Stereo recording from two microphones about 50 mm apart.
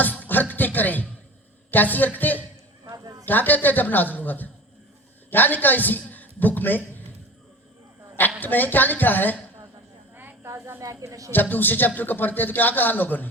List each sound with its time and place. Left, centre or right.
0.2 s music: left
1.7 s a man's voice: left
8.4 s a man's voice: left
10.4 s snake: right
11.3 s a man's voice: left